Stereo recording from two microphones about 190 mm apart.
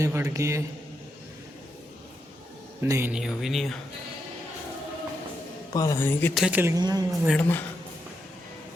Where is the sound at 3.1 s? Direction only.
Centre (ahead or behind).